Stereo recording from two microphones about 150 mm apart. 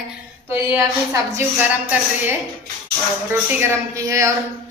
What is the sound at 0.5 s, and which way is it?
A woman's voice, 15° right (ahead or behind).